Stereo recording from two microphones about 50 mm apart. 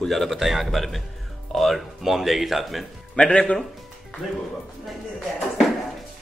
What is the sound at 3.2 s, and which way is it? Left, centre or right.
Speech, centre.